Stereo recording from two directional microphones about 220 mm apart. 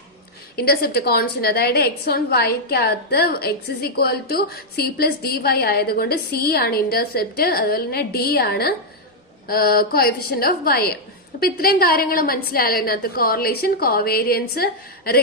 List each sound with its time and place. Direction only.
0.5 s a woman's voice: 45° left (ahead or behind)